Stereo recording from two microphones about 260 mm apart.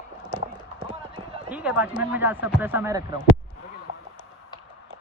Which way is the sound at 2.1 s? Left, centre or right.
Centre.